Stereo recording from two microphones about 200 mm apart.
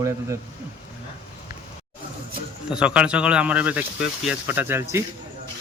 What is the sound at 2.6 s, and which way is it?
Speech, 5° right (ahead or behind).